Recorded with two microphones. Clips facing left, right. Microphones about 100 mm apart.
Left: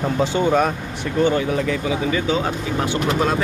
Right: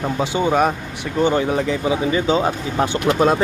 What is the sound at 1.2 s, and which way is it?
Speech, 25° right (ahead or behind).